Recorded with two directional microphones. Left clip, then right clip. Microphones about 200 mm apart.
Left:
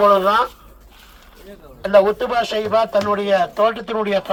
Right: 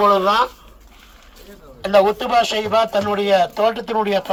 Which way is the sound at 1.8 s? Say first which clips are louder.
Left 1 dB; 10° right (ahead or behind).